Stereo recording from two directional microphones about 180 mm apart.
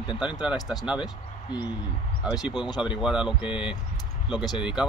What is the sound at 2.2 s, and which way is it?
Speech, 5° right (ahead or behind).